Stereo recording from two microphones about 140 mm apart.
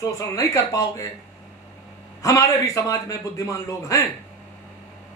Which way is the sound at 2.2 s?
20° left (ahead or behind).